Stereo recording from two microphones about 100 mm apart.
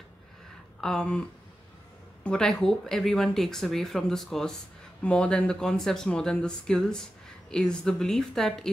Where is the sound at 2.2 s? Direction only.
10° left (ahead or behind).